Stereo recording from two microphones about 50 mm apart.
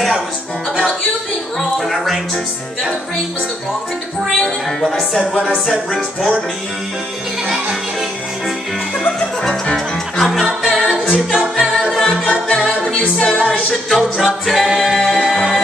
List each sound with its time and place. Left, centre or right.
1.6 s a woman's voice: centre
4.4 s a woman's voice: centre
5.2 s music: centre
5.7 s a woman's voice: centre
10.2 s music: centre
12.8 s music: centre
13.8 s music: centre